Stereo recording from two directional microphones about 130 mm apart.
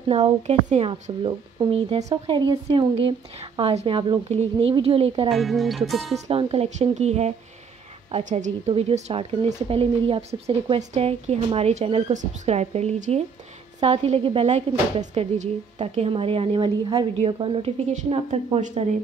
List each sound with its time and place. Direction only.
0.1 s a woman's voice: 55° right (ahead or behind); by 2.9 s 35° right (ahead or behind)
2.9 s speech: 50° right (ahead or behind)
5.3 s speech: centre (ahead or behind)
6.1 s speech: 55° right (ahead or behind)
8.2 s speech: 70° right (ahead or behind); by 12.0 s 50° right (ahead or behind)
12.1 s speech: 65° right (ahead or behind); by 18.7 s 45° right (ahead or behind)